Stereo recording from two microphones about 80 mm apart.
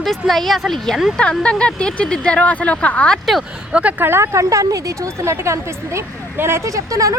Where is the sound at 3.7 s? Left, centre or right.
Centre.